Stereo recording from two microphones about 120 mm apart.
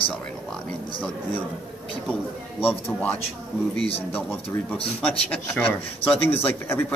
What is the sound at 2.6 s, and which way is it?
Speech, 15° left (ahead or behind).